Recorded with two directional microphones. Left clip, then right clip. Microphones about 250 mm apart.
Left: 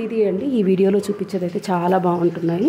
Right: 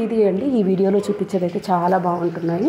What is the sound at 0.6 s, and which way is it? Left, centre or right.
Speech, centre.